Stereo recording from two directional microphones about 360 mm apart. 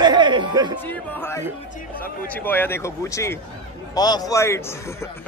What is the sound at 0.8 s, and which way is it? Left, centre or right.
A man's voice, centre.